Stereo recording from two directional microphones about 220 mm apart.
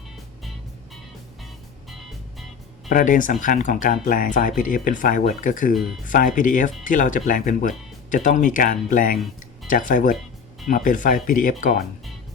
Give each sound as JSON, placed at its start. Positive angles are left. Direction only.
{"t": 2.9, "sound": "speech", "side_deg": 35}